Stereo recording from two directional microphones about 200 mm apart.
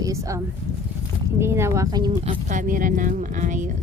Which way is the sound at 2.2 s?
35° right (ahead or behind).